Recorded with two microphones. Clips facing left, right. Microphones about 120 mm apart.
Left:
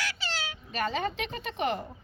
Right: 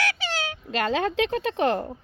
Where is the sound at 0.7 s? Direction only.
90° right.